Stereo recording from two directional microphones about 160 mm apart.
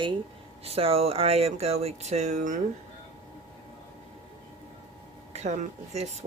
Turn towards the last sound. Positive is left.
turn(degrees=-45)  # may be behind; listen again after turning